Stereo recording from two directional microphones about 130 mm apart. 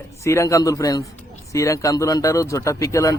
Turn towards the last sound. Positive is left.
turn(degrees=25)  # may be behind; listen again after turning